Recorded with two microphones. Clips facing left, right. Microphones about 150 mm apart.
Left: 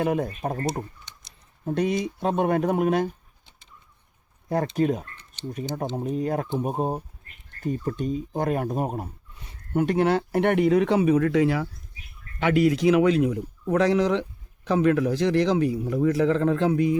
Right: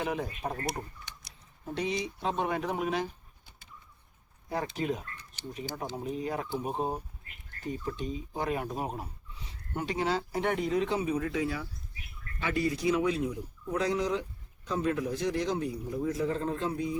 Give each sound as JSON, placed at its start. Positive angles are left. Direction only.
{"t": 0.0, "sound": "speech", "side_deg": 50}
{"t": 0.6, "sound": "speech", "side_deg": 25}
{"t": 1.6, "sound": "speech", "side_deg": 50}
{"t": 4.8, "sound": "speech", "side_deg": 50}
{"t": 6.1, "sound": "speech", "side_deg": 45}